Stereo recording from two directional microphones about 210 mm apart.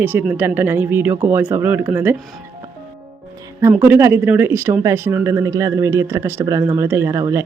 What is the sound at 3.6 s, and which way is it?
Speech, 10° right (ahead or behind).